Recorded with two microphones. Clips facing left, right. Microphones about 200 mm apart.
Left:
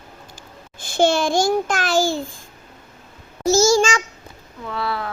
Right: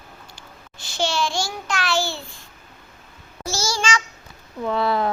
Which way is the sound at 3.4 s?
45° left (ahead or behind).